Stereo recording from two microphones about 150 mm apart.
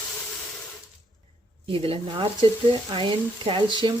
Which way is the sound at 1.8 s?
35° right (ahead or behind).